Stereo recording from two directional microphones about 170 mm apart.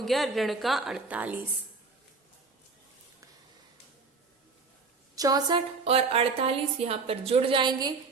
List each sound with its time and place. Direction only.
0.0 s a woman's voice: centre (ahead or behind)
5.1 s a woman's voice: 20° right (ahead or behind)